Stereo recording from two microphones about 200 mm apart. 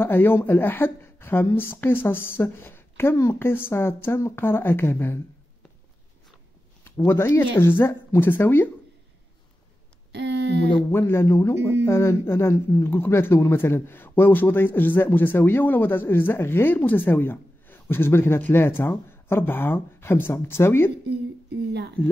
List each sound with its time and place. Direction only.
0.0 s speech: 10° left (ahead or behind)
7.0 s speech: 10° left (ahead or behind)
10.1 s speech: 60° right (ahead or behind)
10.9 s speech: 10° left (ahead or behind)